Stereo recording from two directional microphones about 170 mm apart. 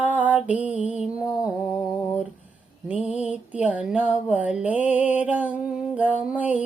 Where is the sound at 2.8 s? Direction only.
10° right (ahead or behind).